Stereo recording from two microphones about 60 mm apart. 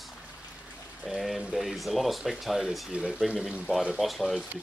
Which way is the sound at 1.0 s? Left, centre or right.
Centre.